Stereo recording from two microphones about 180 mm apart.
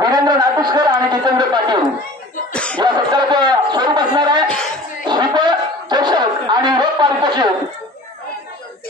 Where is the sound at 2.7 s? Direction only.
25° right (ahead or behind).